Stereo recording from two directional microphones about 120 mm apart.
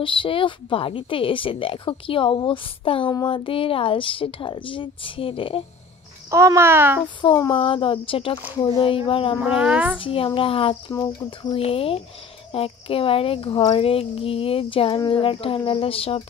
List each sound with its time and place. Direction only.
0.0 s speech: 45° left (ahead or behind)
6.3 s a child's voice: 25° right (ahead or behind)
7.2 s speech: 45° left (ahead or behind)
9.4 s speech: 10° right (ahead or behind)
9.9 s speech: 50° left (ahead or behind)
10.9 s speech: 25° left (ahead or behind)
11.2 s speech: 50° left (ahead or behind)
13.7 s speech: 50° left (ahead or behind)